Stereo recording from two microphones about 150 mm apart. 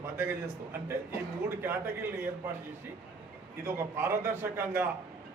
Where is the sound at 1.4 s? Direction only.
15° right (ahead or behind).